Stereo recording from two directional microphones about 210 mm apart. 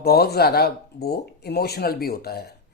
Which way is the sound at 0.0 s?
50° left (ahead or behind).